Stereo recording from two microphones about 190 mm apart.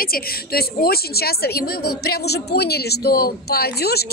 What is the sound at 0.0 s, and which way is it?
A woman's voice, 50° left (ahead or behind).